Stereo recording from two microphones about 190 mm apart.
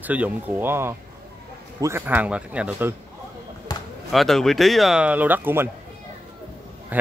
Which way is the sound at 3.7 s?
20° left (ahead or behind).